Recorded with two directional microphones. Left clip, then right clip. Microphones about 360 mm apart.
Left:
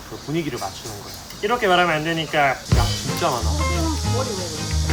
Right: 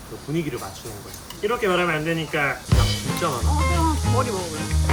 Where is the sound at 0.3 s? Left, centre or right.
Centre.